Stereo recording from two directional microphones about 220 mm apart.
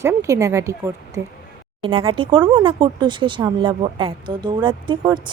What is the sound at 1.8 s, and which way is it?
Speech, 25° right (ahead or behind).